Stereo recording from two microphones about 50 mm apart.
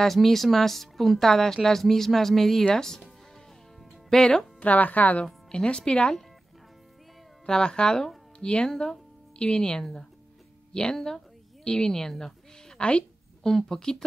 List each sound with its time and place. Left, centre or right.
0.0 s speech: centre
4.1 s speech: centre
4.6 s speech: left
5.2 s speech: centre
7.4 s a woman's voice: centre